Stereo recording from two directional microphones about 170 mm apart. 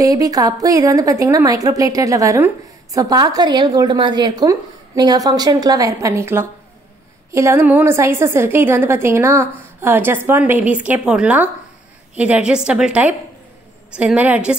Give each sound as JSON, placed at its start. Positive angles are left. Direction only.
{"t": 0.0, "sound": "a woman's voice", "side_deg": -20}